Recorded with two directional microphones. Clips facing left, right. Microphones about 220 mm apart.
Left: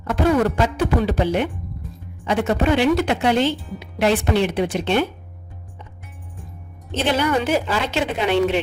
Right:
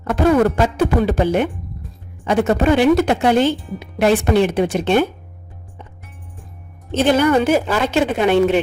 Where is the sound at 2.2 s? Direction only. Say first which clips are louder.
Right 4 dB; 45° right (ahead or behind).